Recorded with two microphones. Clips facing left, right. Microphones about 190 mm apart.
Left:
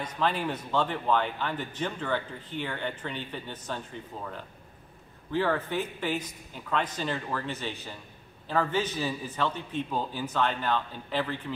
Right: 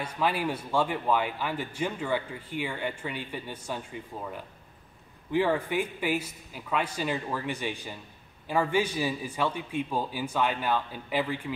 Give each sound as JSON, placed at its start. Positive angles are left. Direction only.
{"t": 0.0, "sound": "speech", "side_deg": -10}